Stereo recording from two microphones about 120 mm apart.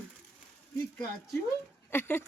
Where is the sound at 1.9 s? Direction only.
15° left (ahead or behind).